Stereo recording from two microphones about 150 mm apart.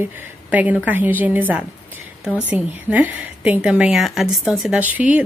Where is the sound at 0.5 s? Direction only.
10° right (ahead or behind).